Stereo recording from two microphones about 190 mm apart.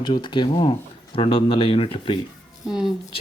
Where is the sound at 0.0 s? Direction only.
25° left (ahead or behind).